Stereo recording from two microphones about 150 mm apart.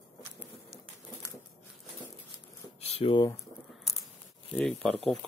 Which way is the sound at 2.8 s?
40° left (ahead or behind).